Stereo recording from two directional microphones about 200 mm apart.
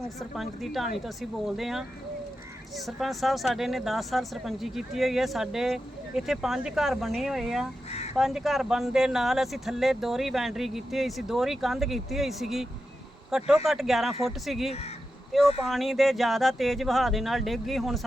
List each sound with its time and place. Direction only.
0.2 s speech: centre (ahead or behind)
7.9 s a sound: 30° left (ahead or behind)
8.1 s speech: centre (ahead or behind)
14.7 s speech: 30° left (ahead or behind)
15.6 s speech: centre (ahead or behind)